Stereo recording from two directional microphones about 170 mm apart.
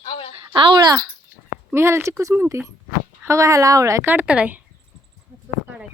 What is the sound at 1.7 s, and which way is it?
A woman's voice, 15° right (ahead or behind).